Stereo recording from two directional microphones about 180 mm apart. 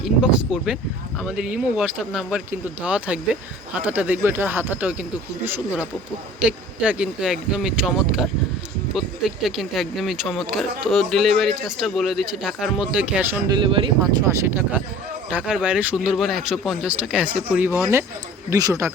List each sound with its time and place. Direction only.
0.0 s speech: 5° right (ahead or behind)
13.5 s speech: 30° right (ahead or behind)
14.3 s speech: 15° right (ahead or behind)